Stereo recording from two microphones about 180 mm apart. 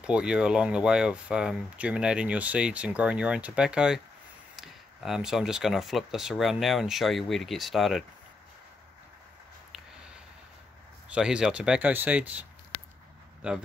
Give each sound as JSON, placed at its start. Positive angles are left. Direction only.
{"t": 0.0, "sound": "speech", "side_deg": -5}
{"t": 11.1, "sound": "speech", "side_deg": -5}